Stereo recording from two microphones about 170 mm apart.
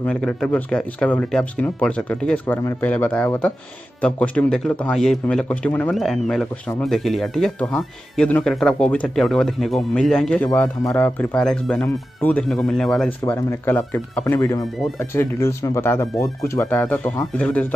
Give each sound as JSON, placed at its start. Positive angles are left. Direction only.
{"t": 0.0, "sound": "speech", "side_deg": 5}
{"t": 13.2, "sound": "speech", "side_deg": 15}